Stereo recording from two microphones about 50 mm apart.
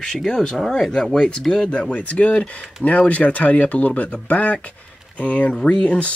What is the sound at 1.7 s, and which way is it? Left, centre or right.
Speech, left.